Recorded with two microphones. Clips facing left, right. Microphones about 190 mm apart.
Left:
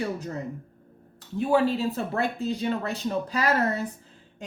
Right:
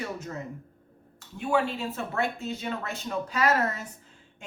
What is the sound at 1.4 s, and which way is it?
Speech, 35° left (ahead or behind).